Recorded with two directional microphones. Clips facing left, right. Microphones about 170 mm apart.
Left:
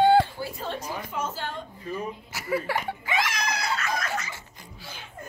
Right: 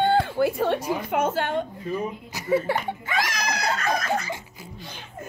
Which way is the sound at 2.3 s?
20° right (ahead or behind).